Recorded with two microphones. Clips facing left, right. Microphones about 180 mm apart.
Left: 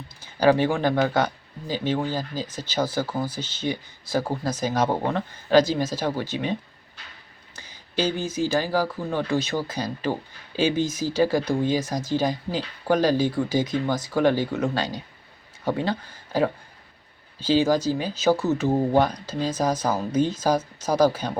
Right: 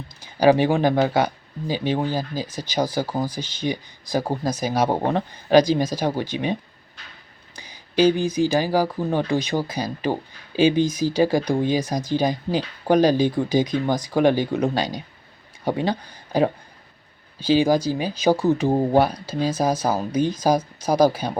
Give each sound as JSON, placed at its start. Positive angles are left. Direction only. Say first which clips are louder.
{"t": 0.2, "sound": "speech", "louder": "right 3 dB", "side_deg": -15}